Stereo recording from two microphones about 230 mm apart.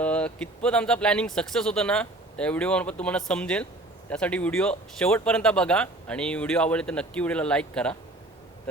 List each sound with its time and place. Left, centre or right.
0.0 s speech: centre